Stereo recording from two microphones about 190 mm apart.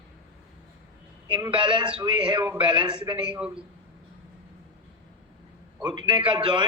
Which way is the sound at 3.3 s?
5° right (ahead or behind).